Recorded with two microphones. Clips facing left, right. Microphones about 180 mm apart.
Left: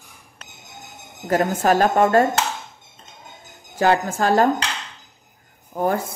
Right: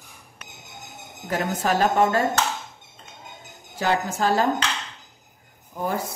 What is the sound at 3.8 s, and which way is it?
Speech, 55° left (ahead or behind).